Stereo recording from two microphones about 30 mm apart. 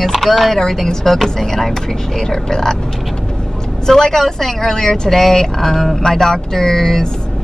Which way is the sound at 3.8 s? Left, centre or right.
Centre.